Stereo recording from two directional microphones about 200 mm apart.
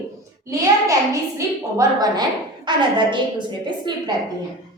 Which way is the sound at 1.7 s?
20° right (ahead or behind).